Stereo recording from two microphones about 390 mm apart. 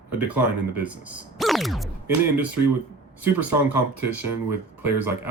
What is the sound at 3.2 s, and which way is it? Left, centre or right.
Speech, centre.